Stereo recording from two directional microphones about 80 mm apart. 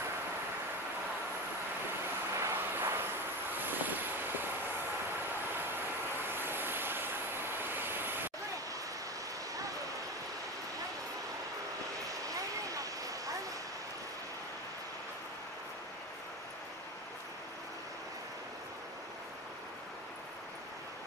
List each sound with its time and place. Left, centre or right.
2.3 s vehicle: right
6.3 s vehicle: right
12.1 s vehicle: right